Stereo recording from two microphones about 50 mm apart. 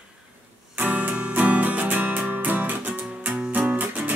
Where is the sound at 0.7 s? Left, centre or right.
Right.